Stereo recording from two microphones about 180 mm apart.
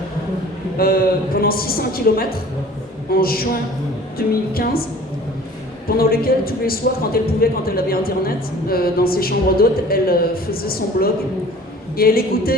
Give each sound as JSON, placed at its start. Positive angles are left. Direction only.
{"t": 0.8, "sound": "a man's voice", "side_deg": 55}
{"t": 6.0, "sound": "a man's voice", "side_deg": 55}